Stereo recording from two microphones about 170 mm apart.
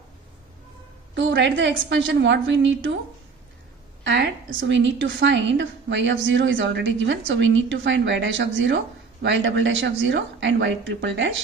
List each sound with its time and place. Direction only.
1.1 s a woman's voice: 90° right
4.0 s a woman's voice: 90° right